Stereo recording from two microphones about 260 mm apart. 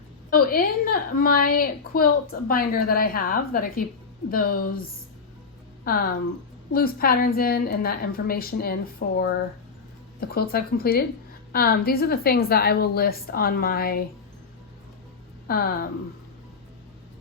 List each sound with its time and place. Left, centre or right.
0.3 s a woman's voice: left
5.8 s a woman's voice: left
15.4 s a woman's voice: left